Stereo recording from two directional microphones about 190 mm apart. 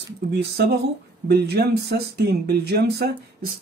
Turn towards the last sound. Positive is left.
turn(degrees=-60)  # may be behind; listen again after turning